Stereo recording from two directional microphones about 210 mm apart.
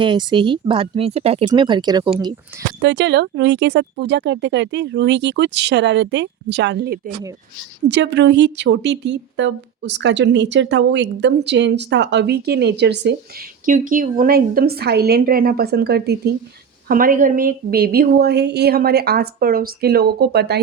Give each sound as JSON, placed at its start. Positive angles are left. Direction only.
{"t": 0.0, "sound": "speech", "side_deg": -20}
{"t": 2.8, "sound": "a woman's voice", "side_deg": -55}
{"t": 13.7, "sound": "speech", "side_deg": -40}